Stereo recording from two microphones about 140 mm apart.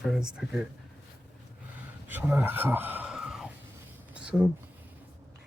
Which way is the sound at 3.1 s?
5° right (ahead or behind).